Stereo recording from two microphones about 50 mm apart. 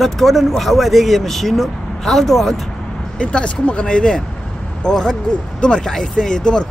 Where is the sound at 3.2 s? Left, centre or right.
Centre.